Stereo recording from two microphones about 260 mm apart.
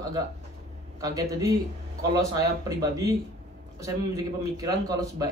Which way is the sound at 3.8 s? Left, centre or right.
Centre.